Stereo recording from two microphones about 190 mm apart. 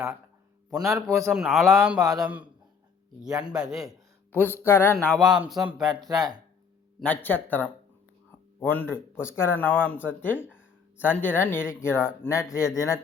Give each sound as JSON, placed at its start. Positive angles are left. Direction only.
{"t": 0.7, "sound": "a man's voice", "side_deg": 0}
{"t": 3.2, "sound": "speech", "side_deg": -20}
{"t": 3.5, "sound": "a man's voice", "side_deg": 0}
{"t": 4.3, "sound": "speech", "side_deg": 10}
{"t": 5.2, "sound": "a man's voice", "side_deg": -5}
{"t": 5.9, "sound": "speech", "side_deg": -20}
{"t": 7.0, "sound": "speech", "side_deg": 10}